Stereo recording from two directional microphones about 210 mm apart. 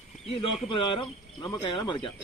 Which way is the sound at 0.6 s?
25° left (ahead or behind).